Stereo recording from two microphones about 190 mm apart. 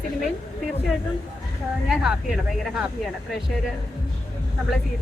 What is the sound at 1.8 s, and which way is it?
A woman's voice, centre (ahead or behind).